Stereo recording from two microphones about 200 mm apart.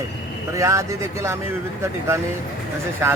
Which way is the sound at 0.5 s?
15° right (ahead or behind).